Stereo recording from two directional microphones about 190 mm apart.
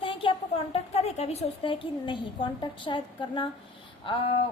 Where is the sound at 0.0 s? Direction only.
25° left (ahead or behind).